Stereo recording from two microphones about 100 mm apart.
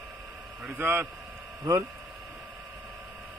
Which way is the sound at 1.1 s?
5° right (ahead or behind).